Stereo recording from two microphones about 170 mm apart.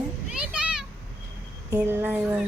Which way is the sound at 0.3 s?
5° right (ahead or behind).